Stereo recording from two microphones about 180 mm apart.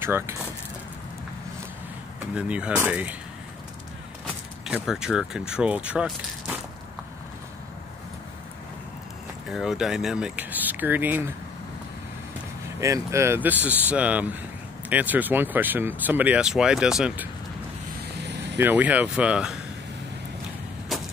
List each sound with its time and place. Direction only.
0.0 s speech: 15° right (ahead or behind)
2.3 s speech: 5° right (ahead or behind)
4.6 s speech: 5° right (ahead or behind)
9.5 s speech: centre (ahead or behind)
12.8 s speech: 15° right (ahead or behind)
18.1 s vehicle: 70° right (ahead or behind)
18.6 s speech: 10° right (ahead or behind)
20.9 s a sound: centre (ahead or behind)